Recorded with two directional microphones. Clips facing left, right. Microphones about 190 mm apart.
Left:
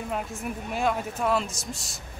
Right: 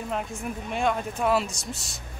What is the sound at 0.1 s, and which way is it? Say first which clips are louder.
Speech: right 1 dB; centre (ahead or behind).